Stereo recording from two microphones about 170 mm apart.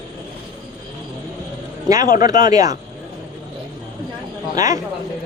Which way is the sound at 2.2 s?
20° right (ahead or behind).